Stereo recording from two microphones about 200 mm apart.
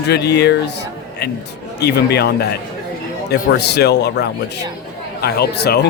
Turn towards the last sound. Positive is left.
turn(degrees=55)  # may be behind; listen again after turning